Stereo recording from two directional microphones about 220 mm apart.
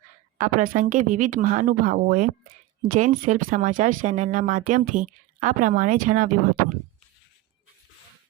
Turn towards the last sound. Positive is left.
turn(degrees=-40)  # may be behind; listen again after turning